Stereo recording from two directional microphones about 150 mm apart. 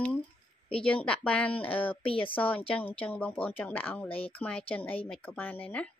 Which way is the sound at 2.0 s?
40° left (ahead or behind).